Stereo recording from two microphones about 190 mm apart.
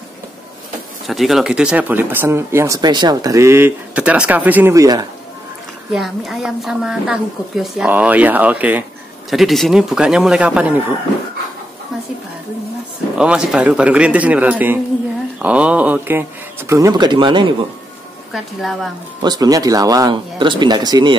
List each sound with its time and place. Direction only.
1.0 s speech: centre (ahead or behind); by 5.0 s 20° right (ahead or behind)
5.9 s a woman's voice: centre (ahead or behind)
13.2 s speech: 5° right (ahead or behind); by 17.6 s 25° right (ahead or behind)
18.3 s a woman's voice: centre (ahead or behind)
19.2 s speech: 20° right (ahead or behind)